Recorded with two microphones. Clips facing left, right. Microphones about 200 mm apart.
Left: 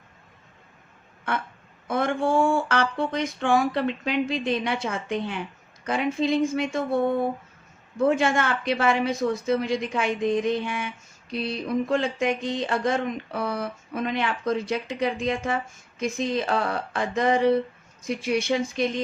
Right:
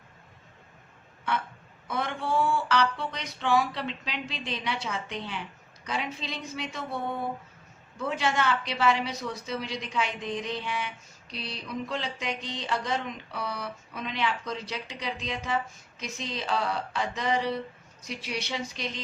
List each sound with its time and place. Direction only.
1.9 s speech: 50° left (ahead or behind)